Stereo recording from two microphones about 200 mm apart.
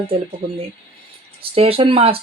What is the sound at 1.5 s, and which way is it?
Speech, 30° right (ahead or behind).